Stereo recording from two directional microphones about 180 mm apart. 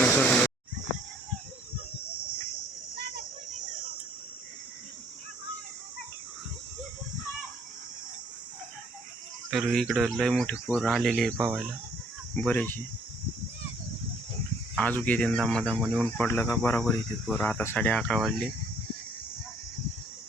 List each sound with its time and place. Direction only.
0.0 s a sound: 5° left (ahead or behind)
9.5 s speech: centre (ahead or behind)
14.8 s speech: 10° left (ahead or behind)